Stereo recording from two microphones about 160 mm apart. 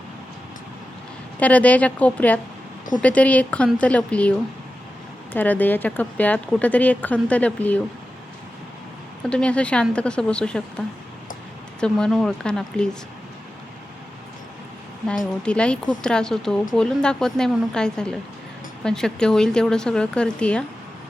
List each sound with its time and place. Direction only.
1.4 s speech: 10° left (ahead or behind)
9.2 s speech: 5° left (ahead or behind)
15.0 s speech: 5° left (ahead or behind)